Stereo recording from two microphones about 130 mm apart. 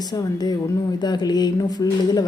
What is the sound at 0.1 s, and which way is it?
A woman's voice, 30° left (ahead or behind).